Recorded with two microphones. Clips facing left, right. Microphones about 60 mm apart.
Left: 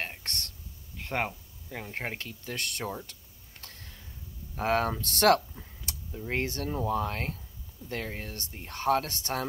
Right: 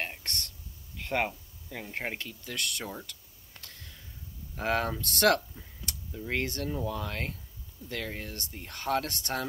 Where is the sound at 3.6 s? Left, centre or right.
Left.